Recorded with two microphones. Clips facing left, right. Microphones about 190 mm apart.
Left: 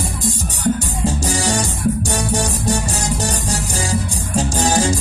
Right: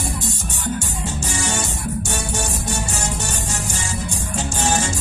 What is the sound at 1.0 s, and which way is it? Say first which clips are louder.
Music: left 10 dB; 35° left (ahead or behind).